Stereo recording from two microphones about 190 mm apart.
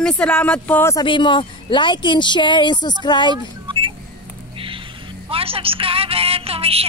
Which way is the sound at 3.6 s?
25° right (ahead or behind).